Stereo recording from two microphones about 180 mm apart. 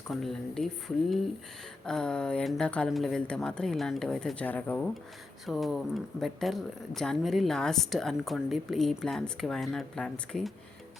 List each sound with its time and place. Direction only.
0.1 s speech: centre (ahead or behind)